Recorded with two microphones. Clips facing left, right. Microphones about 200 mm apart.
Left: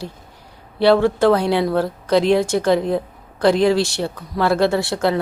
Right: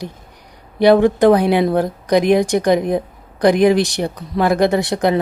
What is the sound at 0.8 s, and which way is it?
Speech, 15° right (ahead or behind).